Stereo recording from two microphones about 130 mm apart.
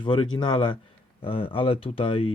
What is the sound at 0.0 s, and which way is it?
Speech, 35° left (ahead or behind).